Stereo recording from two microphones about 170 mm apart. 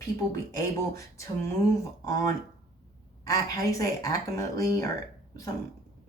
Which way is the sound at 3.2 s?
20° left (ahead or behind).